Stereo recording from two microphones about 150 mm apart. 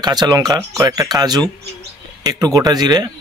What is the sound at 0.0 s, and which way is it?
Speech, 25° right (ahead or behind).